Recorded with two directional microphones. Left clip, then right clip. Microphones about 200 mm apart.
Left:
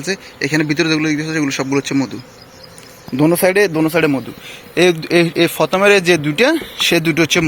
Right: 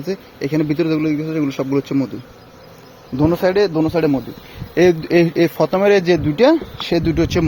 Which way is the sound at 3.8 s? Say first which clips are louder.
Left 2 dB; 5° left (ahead or behind).